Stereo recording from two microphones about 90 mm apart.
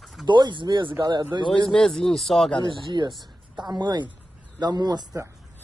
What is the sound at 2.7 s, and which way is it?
Speech, 60° right (ahead or behind).